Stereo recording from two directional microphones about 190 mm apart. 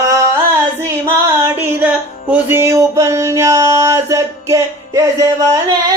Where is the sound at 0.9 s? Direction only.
15° right (ahead or behind).